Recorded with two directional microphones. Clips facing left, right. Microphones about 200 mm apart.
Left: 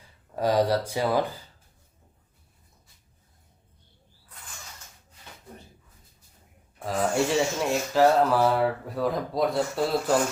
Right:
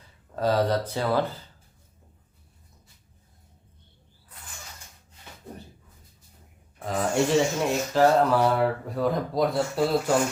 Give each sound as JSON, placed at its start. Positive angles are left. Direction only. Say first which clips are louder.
{"t": 0.3, "sound": "speech", "louder": "left 1 dB", "side_deg": 15}
{"t": 6.7, "sound": "speech", "louder": "even", "side_deg": 0}